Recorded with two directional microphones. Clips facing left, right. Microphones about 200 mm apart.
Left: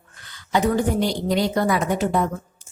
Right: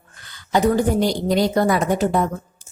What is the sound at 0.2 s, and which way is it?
A woman's voice, 40° right (ahead or behind).